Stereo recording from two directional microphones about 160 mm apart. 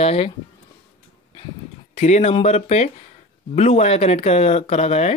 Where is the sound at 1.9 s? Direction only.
45° left (ahead or behind).